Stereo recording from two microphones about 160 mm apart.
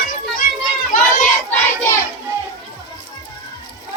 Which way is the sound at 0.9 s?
60° left (ahead or behind).